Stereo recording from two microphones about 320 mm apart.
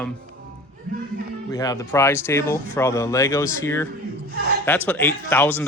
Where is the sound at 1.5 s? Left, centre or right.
Centre.